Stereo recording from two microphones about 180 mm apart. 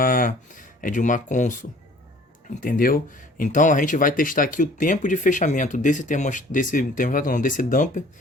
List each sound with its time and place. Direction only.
0.0 s speech: 50° left (ahead or behind)
2.6 s speech: 50° left (ahead or behind)